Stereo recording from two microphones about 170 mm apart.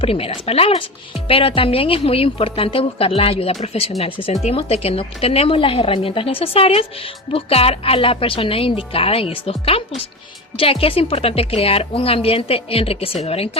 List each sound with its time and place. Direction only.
0.0 s speech: 35° left (ahead or behind)